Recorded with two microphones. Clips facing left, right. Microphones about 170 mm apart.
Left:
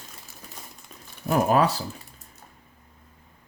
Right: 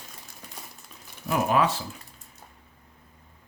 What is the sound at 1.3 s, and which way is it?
Speech, 40° left (ahead or behind).